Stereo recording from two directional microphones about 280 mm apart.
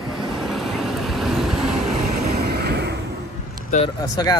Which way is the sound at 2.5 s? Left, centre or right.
Right.